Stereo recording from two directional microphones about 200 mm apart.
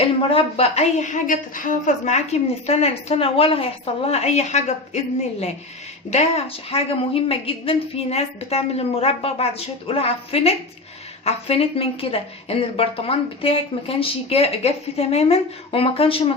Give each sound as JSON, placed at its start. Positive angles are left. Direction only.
{"t": 0.0, "sound": "a woman's voice", "side_deg": 30}